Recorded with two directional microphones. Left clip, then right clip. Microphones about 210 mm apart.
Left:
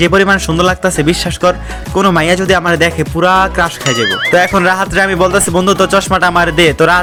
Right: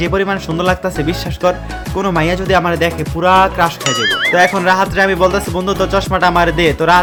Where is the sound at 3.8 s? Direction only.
Centre (ahead or behind).